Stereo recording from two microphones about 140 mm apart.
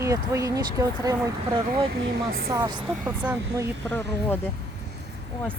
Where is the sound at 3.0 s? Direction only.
10° right (ahead or behind).